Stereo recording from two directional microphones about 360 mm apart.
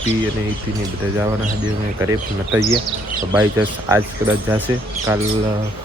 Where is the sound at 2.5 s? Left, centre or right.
Centre.